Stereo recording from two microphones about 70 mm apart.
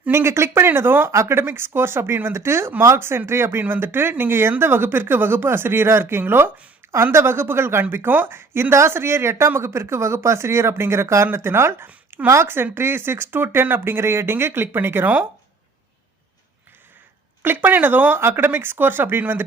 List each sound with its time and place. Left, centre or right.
0.1 s speech: right
11.9 s a sound: right
12.3 s speech: right
17.4 s speech: right